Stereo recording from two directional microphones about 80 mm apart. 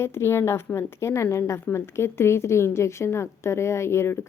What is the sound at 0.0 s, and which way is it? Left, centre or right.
A woman's voice, left.